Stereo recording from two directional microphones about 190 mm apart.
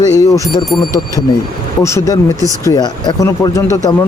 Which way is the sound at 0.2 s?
15° left (ahead or behind).